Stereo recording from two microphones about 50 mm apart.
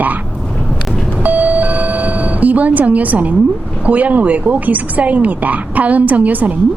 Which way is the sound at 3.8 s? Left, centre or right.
Right.